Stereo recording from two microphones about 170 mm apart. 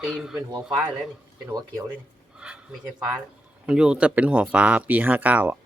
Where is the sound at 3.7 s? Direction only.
5° right (ahead or behind).